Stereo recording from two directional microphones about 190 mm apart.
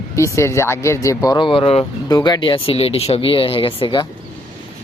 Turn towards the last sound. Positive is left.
turn(degrees=25)  # may be behind; listen again after turning